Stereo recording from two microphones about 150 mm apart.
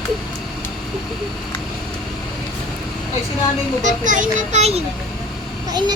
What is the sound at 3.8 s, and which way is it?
Speech, 55° right (ahead or behind).